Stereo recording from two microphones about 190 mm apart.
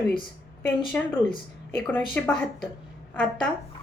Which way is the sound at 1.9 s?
10° left (ahead or behind).